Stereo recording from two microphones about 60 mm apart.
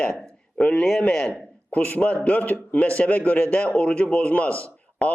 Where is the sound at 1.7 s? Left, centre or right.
Left.